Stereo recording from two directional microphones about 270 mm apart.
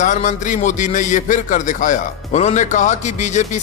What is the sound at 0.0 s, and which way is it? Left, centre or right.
Speech, left.